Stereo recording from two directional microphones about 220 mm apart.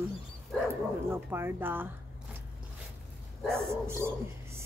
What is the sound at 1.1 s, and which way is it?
Speech, 10° right (ahead or behind).